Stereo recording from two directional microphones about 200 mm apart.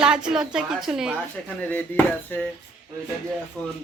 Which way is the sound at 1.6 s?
10° left (ahead or behind).